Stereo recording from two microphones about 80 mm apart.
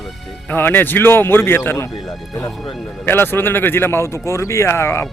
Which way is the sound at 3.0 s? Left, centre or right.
Left.